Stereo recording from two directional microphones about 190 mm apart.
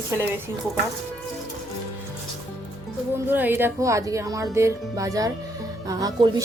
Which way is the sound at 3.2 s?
10° right (ahead or behind).